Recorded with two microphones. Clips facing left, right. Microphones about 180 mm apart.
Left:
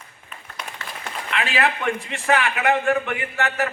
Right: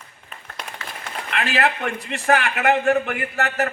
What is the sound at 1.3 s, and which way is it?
A man's voice, 45° right (ahead or behind).